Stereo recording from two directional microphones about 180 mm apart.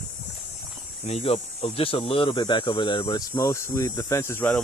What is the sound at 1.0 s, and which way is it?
Speech, 35° left (ahead or behind).